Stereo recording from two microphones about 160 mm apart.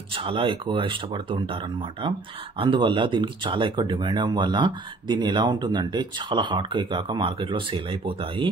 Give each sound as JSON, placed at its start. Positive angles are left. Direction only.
{"t": 0.1, "sound": "speech", "side_deg": -35}